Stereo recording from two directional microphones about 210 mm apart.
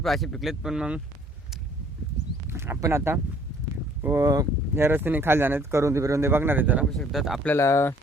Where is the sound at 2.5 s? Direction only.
10° right (ahead or behind).